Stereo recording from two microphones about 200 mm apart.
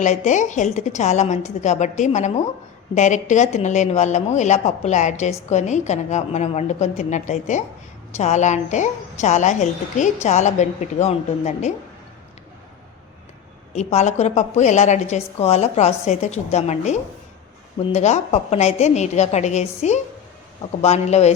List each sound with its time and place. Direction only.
0.0 s speech: 35° left (ahead or behind)
13.7 s speech: 35° left (ahead or behind)